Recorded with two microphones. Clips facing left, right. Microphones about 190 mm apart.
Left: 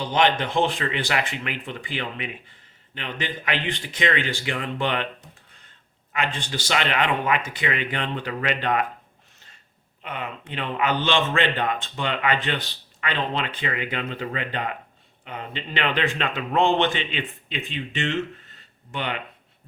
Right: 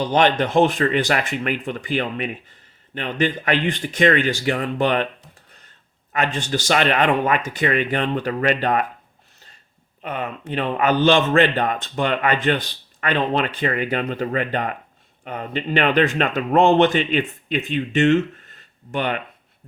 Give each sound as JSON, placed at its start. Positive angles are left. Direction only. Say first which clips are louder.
{"t": 0.0, "sound": "speech", "louder": "right 4 dB", "side_deg": -45}
{"t": 6.1, "sound": "speech", "louder": "right 5 dB", "side_deg": -45}
{"t": 10.0, "sound": "speech", "louder": "right 5 dB", "side_deg": -40}